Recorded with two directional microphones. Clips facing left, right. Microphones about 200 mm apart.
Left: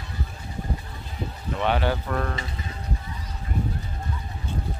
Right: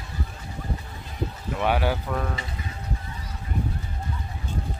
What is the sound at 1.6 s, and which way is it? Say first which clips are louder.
Speech: even; 10° right (ahead or behind).